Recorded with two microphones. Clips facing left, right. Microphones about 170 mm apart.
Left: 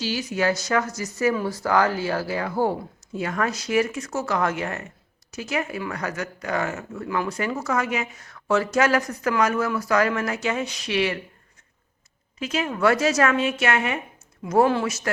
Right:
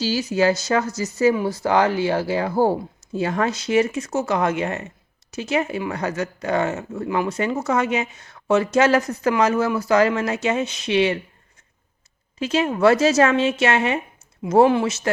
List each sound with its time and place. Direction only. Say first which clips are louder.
0.0 s speech: right 5 dB; 30° right (ahead or behind)
12.4 s speech: right 5 dB; 30° right (ahead or behind)